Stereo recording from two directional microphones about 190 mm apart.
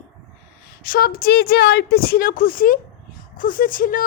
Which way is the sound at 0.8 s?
50° left (ahead or behind).